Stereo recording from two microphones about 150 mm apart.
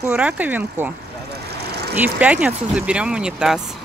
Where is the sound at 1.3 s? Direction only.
90° right.